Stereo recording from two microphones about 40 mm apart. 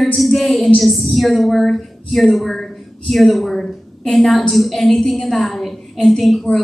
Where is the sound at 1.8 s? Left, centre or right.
Centre.